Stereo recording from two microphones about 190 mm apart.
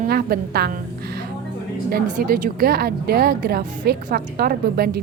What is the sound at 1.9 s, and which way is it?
A woman's voice, 50° right (ahead or behind).